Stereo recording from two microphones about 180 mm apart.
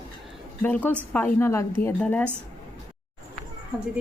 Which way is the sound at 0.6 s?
10° left (ahead or behind).